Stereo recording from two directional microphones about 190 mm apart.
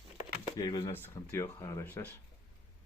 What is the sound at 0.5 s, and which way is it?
Speech, 20° left (ahead or behind).